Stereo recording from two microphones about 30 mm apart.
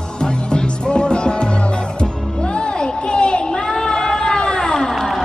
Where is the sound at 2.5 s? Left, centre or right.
Left.